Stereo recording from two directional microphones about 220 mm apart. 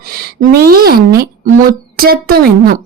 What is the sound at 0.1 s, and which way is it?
A woman's voice, 45° right (ahead or behind).